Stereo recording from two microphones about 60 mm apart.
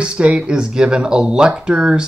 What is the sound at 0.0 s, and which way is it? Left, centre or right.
Speech, centre.